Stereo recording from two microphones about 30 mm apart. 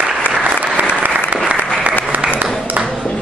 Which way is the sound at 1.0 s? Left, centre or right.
Right.